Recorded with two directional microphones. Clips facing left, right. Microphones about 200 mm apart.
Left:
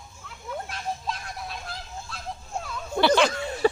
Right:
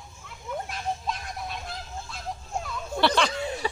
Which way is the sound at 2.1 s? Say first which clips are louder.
Right 1 dB; centre (ahead or behind).